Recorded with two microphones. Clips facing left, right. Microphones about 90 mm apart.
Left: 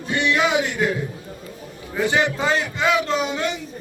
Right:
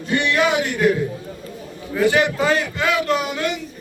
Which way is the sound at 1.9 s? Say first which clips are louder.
Right 3 dB; 20° left (ahead or behind).